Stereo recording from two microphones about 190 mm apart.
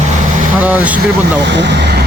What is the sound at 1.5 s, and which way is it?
Speech, 65° right (ahead or behind).